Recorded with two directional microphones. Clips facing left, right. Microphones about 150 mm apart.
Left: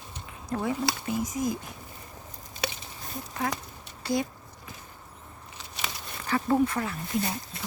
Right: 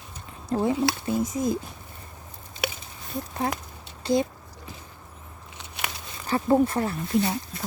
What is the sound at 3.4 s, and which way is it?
Speech, 30° right (ahead or behind).